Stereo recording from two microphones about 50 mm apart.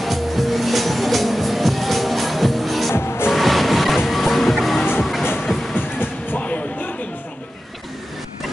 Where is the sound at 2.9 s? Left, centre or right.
Left.